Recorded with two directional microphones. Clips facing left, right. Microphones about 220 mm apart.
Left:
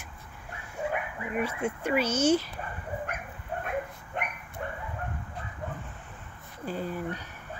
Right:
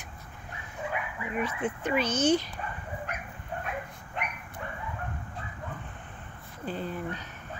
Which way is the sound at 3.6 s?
50° left (ahead or behind).